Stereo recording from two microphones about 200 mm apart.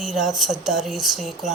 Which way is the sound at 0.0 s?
Centre (ahead or behind).